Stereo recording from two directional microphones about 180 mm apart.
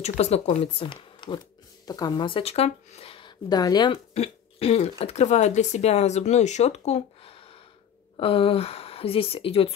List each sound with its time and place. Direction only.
0.0 s speech: 35° left (ahead or behind)
4.1 s speech: 35° left (ahead or behind)